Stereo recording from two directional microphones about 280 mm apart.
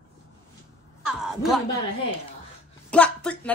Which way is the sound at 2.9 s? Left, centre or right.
Centre.